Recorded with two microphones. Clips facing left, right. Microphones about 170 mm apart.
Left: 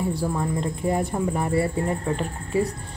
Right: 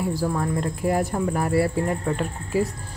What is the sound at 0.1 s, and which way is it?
A woman's voice, centre (ahead or behind).